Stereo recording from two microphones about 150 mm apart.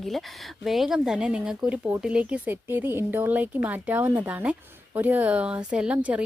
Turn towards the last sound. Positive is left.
turn(degrees=-10)  # may be behind; listen again after turning